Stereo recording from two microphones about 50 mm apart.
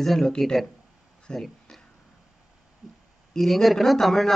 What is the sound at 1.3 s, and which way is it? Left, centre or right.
Speech, centre.